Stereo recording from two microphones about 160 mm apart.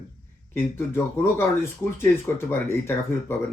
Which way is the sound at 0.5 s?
15° left (ahead or behind).